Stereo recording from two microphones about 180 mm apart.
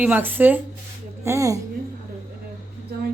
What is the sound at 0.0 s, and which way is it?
Speech, 10° right (ahead or behind).